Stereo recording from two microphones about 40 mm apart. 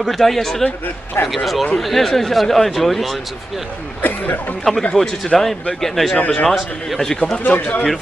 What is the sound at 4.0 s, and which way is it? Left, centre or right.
Speech, left.